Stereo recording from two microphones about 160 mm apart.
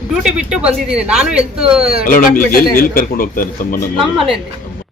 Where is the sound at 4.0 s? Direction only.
Centre (ahead or behind).